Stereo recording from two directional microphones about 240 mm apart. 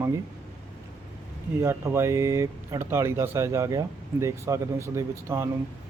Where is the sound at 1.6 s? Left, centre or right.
Centre.